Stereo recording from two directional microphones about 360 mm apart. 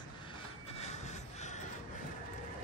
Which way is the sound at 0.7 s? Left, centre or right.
Centre.